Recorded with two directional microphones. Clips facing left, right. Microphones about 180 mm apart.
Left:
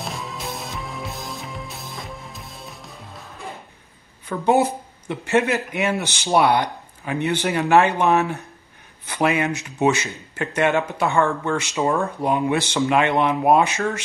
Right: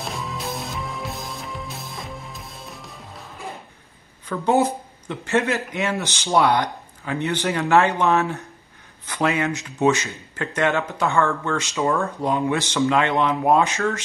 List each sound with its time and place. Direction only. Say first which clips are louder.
0.0 s music: right 1 dB; centre (ahead or behind)
4.3 s speech: left 1 dB; 15° left (ahead or behind)